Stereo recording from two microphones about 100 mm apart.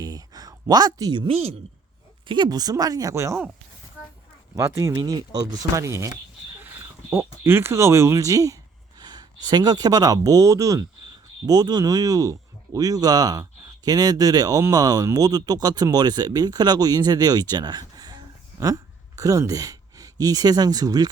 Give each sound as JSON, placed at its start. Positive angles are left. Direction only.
{"t": 0.0, "sound": "a sound", "side_deg": -40}
{"t": 1.3, "sound": "a woman's voice", "side_deg": -75}
{"t": 2.2, "sound": "speech", "side_deg": -50}
{"t": 4.5, "sound": "speech", "side_deg": -35}